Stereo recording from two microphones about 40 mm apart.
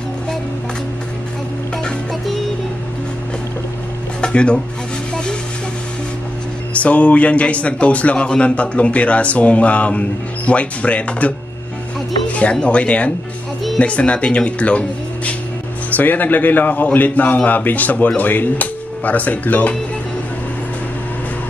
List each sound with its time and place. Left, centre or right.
4.2 s dishes: left
6.8 s speech: left
12.3 s music: left
12.6 s speech: left
16.0 s speech: left